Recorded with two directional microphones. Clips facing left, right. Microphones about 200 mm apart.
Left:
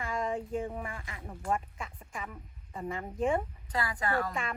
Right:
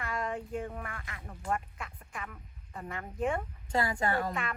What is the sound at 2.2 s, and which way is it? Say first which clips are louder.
Speech: left 2 dB; 10° left (ahead or behind).